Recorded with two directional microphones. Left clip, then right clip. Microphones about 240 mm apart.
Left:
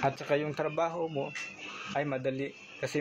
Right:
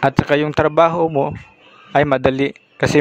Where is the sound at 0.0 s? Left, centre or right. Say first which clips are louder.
Right 14 dB; right.